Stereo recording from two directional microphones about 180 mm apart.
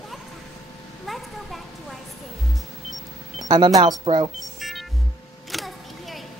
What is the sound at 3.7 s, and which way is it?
Speech, 25° right (ahead or behind).